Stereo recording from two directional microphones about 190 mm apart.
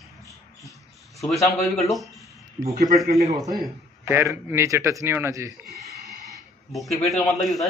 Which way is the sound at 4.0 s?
15° right (ahead or behind).